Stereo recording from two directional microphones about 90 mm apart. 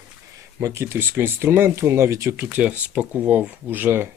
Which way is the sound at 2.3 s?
20° right (ahead or behind).